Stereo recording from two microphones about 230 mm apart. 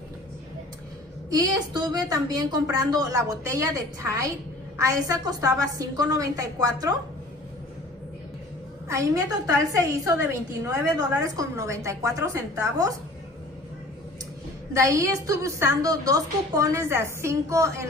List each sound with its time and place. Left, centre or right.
1.3 s a woman's voice: centre
8.8 s a woman's voice: centre
14.7 s a woman's voice: centre